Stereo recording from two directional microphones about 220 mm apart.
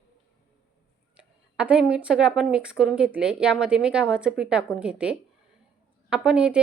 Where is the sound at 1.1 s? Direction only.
5° right (ahead or behind).